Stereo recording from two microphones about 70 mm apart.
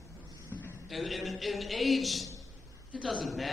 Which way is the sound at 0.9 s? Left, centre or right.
Centre.